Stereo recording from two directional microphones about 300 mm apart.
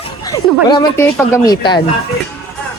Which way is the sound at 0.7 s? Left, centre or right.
Centre.